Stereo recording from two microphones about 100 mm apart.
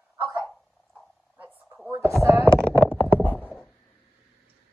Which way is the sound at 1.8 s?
25° right (ahead or behind).